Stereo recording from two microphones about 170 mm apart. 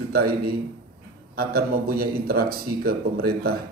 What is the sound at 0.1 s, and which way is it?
Speech, 65° right (ahead or behind).